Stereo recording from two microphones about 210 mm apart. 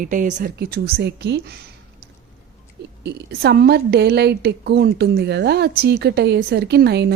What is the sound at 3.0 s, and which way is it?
A woman's voice, 50° right (ahead or behind).